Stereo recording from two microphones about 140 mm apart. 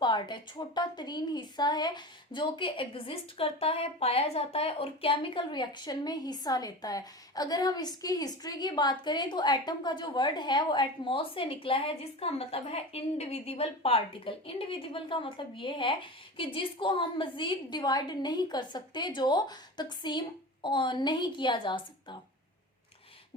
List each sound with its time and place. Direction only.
0.0 s a woman's voice: 35° left (ahead or behind)